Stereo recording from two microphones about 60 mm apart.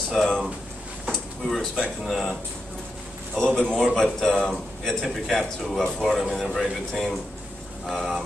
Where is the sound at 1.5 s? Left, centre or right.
Centre.